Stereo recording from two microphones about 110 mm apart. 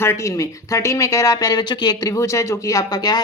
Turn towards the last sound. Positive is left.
turn(degrees=35)  # may be behind; listen again after turning